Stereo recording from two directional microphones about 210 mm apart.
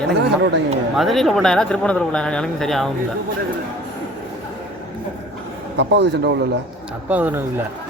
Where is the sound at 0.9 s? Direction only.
Centre (ahead or behind).